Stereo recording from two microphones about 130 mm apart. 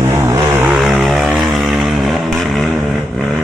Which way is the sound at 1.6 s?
5° right (ahead or behind).